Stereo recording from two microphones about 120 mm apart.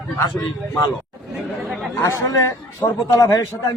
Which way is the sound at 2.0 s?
25° left (ahead or behind).